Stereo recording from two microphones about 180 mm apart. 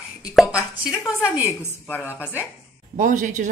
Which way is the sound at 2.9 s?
45° right (ahead or behind).